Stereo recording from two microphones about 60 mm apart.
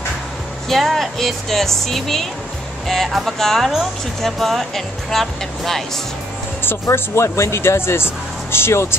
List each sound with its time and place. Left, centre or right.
0.7 s speech: centre
6.6 s speech: left